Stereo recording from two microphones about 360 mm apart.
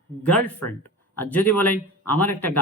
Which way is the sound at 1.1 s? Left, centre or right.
Centre.